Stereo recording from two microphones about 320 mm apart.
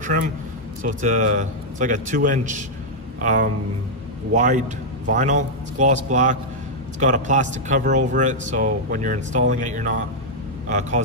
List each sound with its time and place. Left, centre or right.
0.8 s a man's voice: right